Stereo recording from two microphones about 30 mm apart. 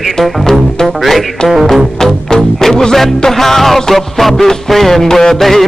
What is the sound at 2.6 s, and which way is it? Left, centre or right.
Music, centre.